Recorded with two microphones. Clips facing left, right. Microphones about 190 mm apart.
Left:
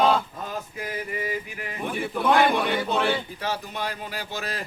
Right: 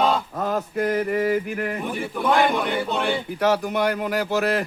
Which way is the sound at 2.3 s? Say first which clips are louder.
Right 1 dB; centre (ahead or behind).